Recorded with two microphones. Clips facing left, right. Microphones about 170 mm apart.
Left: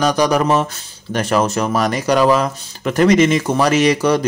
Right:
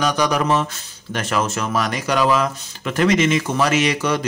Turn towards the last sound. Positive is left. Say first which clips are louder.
# left 6 dB
turn(degrees=35)  # may be behind; listen again after turning